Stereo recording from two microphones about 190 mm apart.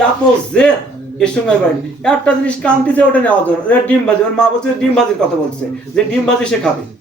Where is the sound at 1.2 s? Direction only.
5° left (ahead or behind).